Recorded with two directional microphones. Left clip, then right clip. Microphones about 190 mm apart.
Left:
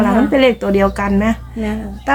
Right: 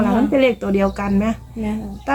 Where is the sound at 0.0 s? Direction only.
15° left (ahead or behind).